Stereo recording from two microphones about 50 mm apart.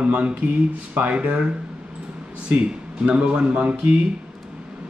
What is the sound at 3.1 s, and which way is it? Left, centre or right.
Speech, right.